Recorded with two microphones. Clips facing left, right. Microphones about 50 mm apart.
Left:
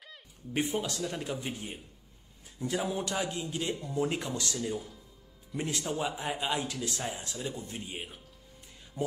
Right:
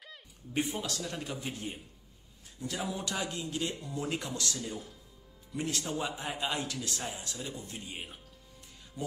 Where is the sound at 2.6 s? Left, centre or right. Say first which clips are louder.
Left 4 dB; left.